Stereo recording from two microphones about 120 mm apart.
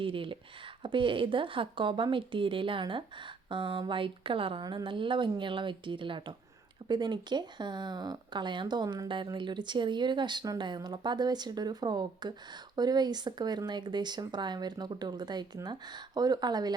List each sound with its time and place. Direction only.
0.0 s speech: 45° right (ahead or behind)